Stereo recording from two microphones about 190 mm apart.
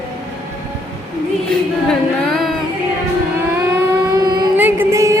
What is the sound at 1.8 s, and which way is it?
Singing, centre (ahead or behind).